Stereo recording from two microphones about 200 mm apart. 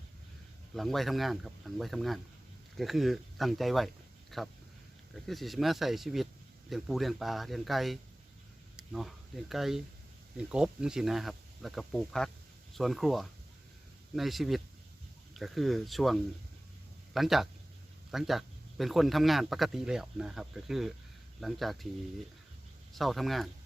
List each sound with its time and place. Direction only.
0.8 s speech: centre (ahead or behind)
23.0 s speech: centre (ahead or behind)